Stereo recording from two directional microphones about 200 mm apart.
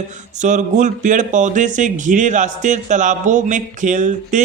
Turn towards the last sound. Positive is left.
turn(degrees=-40)  # may be behind; listen again after turning